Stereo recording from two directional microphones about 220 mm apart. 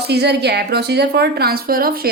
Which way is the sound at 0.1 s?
50° right (ahead or behind).